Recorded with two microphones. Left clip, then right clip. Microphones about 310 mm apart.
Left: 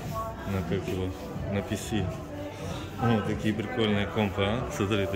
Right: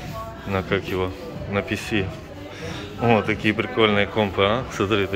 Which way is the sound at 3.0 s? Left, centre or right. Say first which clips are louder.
Right 9 dB; centre.